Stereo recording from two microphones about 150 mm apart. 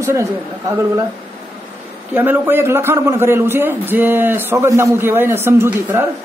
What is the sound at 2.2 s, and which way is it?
A man's voice, 15° right (ahead or behind).